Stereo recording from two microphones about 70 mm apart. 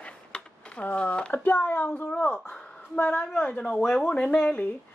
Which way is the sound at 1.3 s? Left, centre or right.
Left.